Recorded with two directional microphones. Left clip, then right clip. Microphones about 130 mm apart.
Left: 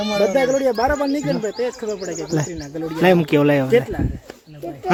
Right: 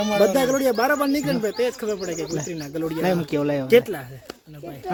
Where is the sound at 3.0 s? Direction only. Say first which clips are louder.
Left 10 dB; 50° left (ahead or behind).